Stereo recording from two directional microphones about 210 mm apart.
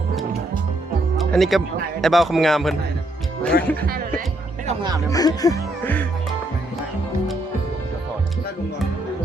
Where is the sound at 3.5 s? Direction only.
50° left (ahead or behind).